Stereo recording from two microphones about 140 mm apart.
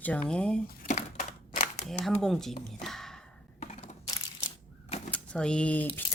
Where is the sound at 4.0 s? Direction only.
25° left (ahead or behind).